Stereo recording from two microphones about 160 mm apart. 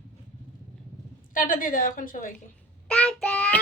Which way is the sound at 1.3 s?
60° left (ahead or behind).